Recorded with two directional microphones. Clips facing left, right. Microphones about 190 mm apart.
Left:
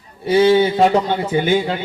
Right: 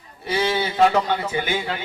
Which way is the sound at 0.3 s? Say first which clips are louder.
Left 10 dB; 30° left (ahead or behind).